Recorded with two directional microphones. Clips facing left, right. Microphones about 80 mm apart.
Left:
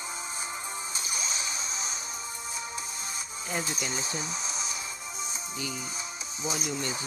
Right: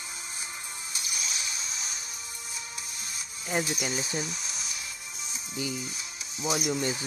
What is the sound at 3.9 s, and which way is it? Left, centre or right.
Speech, left.